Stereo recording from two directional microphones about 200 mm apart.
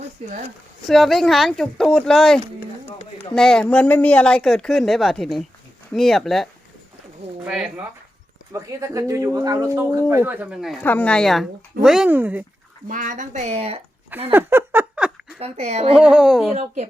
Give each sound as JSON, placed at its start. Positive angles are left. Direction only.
{"t": 0.9, "sound": "speech", "side_deg": 0}
{"t": 8.5, "sound": "speech", "side_deg": -15}
{"t": 12.9, "sound": "speech", "side_deg": -40}
{"t": 14.3, "sound": "a sound", "side_deg": -10}
{"t": 15.4, "sound": "speech", "side_deg": -30}
{"t": 16.0, "sound": "speech", "side_deg": -5}